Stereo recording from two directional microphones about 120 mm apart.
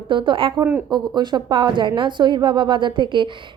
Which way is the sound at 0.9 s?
40° right (ahead or behind).